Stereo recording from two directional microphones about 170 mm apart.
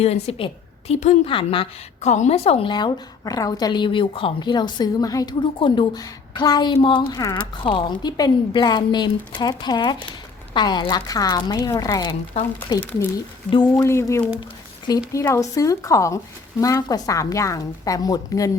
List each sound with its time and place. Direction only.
0.0 s a woman's voice: 35° left (ahead or behind)
13.5 s a woman's voice: 25° left (ahead or behind)
13.8 s a woman's voice: 15° left (ahead or behind)